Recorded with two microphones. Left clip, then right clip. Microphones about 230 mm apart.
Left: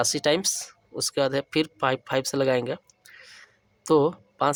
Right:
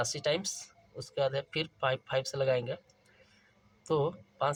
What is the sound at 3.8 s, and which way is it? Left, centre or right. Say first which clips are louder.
Speech: left 10 dB; left.